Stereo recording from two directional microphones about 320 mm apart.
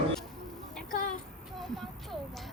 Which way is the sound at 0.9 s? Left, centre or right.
Left.